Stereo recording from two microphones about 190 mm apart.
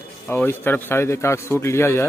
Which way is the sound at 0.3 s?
10° left (ahead or behind).